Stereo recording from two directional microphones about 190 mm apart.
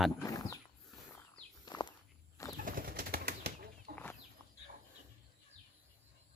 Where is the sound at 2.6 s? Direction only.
50° right (ahead or behind).